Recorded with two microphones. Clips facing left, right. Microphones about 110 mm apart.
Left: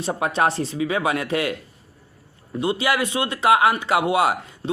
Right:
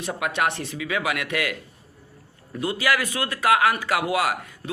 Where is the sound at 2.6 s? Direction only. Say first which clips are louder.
Left 2 dB; 25° left (ahead or behind).